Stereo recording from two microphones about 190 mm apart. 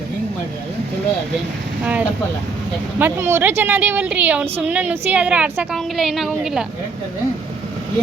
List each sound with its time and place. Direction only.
1.8 s a woman's voice: 5° right (ahead or behind)